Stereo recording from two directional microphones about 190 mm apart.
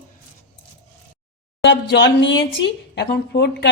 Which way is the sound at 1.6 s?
70° left (ahead or behind).